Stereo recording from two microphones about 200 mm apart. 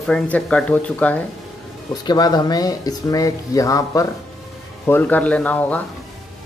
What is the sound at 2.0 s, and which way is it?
Speech, 20° left (ahead or behind).